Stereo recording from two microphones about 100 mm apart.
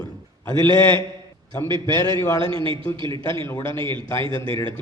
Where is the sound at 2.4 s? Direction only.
60° right (ahead or behind).